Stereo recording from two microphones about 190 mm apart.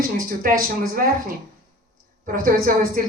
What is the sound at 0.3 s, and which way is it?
Speech, 50° right (ahead or behind).